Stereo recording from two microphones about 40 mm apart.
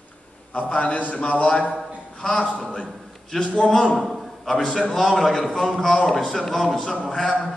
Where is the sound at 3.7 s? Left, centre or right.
Centre.